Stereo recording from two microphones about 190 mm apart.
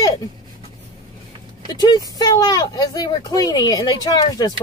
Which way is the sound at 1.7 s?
20° left (ahead or behind).